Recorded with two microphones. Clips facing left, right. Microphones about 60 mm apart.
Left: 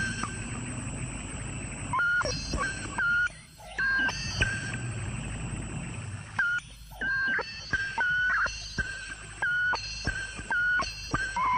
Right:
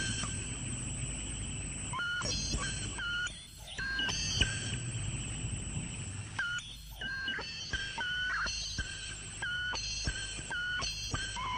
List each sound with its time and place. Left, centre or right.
0.0 s vehicle: left
1.9 s a sound: left
6.3 s music: left